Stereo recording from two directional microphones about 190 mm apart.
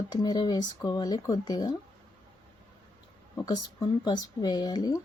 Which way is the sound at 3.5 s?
20° left (ahead or behind).